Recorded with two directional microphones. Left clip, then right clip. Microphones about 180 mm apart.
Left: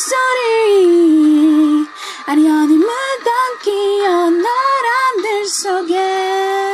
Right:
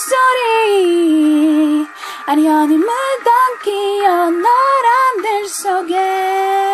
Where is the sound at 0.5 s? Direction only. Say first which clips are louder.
Left 2 dB; 30° left (ahead or behind).